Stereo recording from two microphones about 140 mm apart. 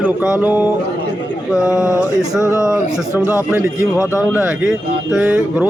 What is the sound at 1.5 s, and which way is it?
Speech, 25° left (ahead or behind).